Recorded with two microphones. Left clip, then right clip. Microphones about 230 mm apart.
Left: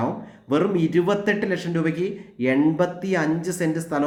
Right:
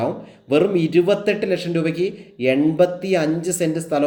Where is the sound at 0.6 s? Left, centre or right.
Left.